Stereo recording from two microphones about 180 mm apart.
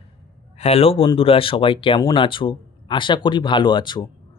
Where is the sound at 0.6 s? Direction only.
35° left (ahead or behind).